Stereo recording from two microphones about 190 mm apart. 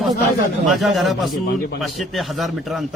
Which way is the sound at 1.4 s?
50° left (ahead or behind).